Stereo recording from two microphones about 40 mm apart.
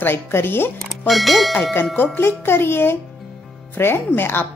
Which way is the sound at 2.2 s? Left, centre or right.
Left.